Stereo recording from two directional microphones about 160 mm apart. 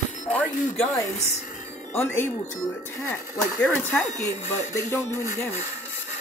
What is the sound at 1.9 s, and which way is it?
Speech, 15° left (ahead or behind).